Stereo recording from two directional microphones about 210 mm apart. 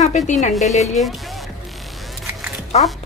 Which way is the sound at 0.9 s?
Centre (ahead or behind).